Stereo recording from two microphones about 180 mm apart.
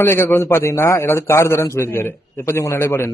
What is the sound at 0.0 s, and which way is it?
A man's voice, 15° left (ahead or behind).